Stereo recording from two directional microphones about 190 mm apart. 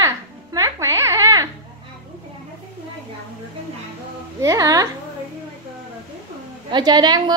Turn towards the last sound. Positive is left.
turn(degrees=-20)  # may be behind; listen again after turning